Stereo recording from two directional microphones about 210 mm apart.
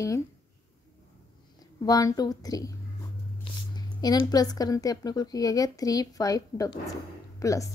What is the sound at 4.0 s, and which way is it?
A woman's voice, 20° left (ahead or behind).